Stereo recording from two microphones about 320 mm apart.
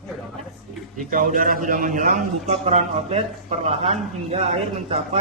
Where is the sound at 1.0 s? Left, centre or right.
Right.